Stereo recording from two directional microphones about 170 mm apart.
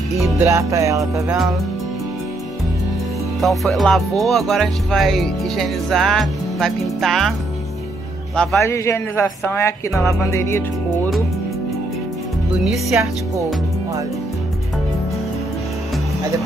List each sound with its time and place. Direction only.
0.4 s music: 15° right (ahead or behind)
3.3 s speech: centre (ahead or behind)
8.5 s a woman's voice: 15° left (ahead or behind)
12.6 s speech: 5° right (ahead or behind)